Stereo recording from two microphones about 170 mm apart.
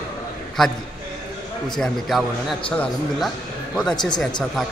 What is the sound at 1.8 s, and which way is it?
A man's voice, centre (ahead or behind).